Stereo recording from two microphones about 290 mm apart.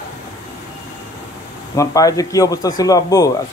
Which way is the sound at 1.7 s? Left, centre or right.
Centre.